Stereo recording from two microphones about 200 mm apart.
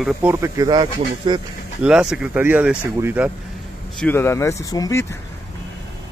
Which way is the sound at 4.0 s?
10° left (ahead or behind).